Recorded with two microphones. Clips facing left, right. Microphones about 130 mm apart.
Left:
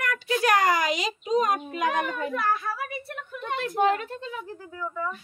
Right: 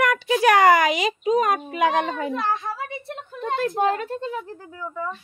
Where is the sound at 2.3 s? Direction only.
25° right (ahead or behind).